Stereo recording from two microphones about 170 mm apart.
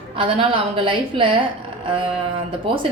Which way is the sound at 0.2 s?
30° right (ahead or behind).